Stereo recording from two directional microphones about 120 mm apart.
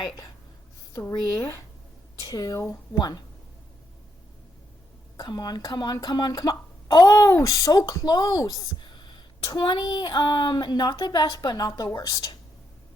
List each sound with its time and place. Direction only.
2.2 s speech: 30° left (ahead or behind)
3.0 s speech: 35° left (ahead or behind)
5.1 s speech: 35° left (ahead or behind)